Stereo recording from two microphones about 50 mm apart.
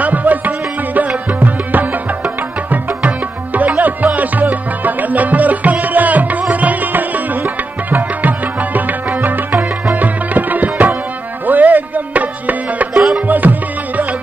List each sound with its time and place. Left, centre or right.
0.0 s music: right